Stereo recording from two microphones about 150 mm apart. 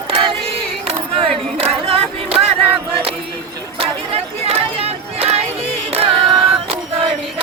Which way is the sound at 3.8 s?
40° right (ahead or behind).